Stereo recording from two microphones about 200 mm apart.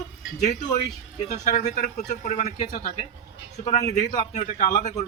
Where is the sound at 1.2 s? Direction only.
35° left (ahead or behind).